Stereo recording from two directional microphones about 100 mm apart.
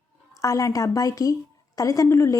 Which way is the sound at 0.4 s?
35° left (ahead or behind).